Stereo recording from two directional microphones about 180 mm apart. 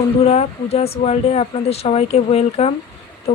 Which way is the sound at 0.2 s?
35° left (ahead or behind).